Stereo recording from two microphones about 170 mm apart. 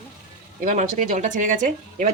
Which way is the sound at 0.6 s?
50° right (ahead or behind).